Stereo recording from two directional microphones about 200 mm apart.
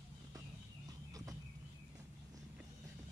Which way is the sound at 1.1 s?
15° right (ahead or behind).